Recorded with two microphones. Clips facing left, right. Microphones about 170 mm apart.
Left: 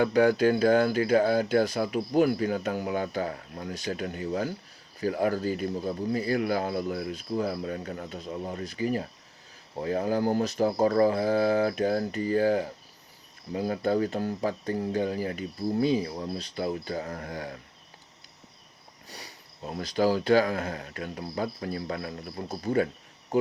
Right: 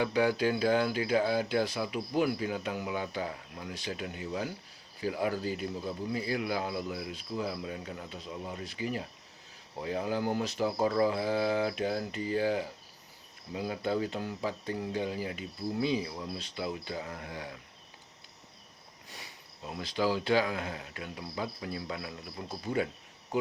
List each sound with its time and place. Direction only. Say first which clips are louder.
0.0 s speech: left 6 dB; 50° left (ahead or behind)
19.0 s speech: left 4 dB; 35° left (ahead or behind)